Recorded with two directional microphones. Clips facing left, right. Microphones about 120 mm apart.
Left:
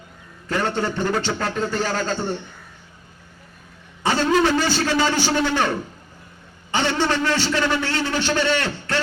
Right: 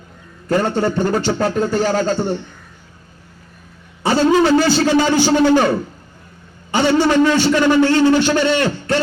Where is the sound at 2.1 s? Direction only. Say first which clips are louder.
Right 5 dB; 15° right (ahead or behind).